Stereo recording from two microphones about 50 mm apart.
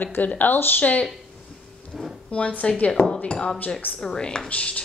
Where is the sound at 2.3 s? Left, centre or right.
Left.